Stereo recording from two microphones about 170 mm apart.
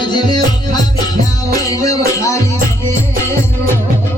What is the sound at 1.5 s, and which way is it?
Music, 20° left (ahead or behind).